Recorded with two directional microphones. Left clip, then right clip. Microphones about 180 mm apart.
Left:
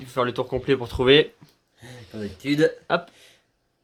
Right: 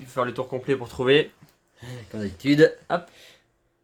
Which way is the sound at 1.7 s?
40° right (ahead or behind).